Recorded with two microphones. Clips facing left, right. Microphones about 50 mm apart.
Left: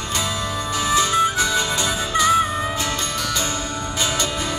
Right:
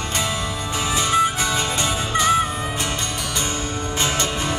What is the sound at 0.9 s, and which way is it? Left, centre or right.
Music, right.